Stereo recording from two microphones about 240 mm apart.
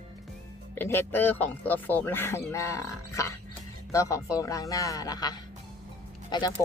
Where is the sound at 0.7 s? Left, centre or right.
Centre.